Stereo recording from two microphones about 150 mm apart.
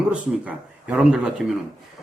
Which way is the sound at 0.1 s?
10° right (ahead or behind).